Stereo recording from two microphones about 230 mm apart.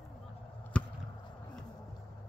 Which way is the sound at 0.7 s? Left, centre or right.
Centre.